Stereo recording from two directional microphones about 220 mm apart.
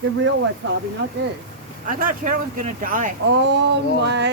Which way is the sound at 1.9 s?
35° right (ahead or behind).